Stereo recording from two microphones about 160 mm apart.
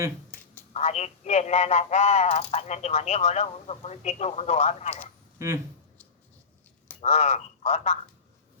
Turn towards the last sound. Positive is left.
turn(degrees=45)  # may be behind; listen again after turning